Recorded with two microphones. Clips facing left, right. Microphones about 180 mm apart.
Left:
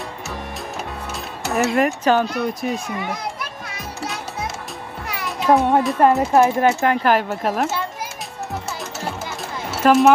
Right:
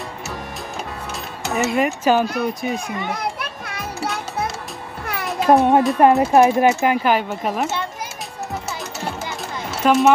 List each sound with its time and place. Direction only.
1.4 s speech: centre (ahead or behind)
3.3 s music: 60° right (ahead or behind)
5.5 s a child's voice: 20° right (ahead or behind); by 7.8 s centre (ahead or behind)
9.8 s speech: centre (ahead or behind)